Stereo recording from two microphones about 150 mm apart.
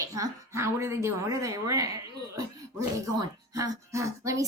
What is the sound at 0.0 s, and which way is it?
A woman's voice, 25° right (ahead or behind).